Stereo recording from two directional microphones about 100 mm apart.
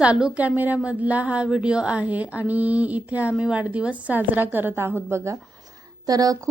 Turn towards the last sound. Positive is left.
turn(degrees=-40)  # may be behind; listen again after turning